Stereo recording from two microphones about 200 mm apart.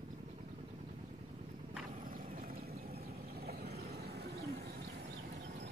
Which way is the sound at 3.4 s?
55° right (ahead or behind).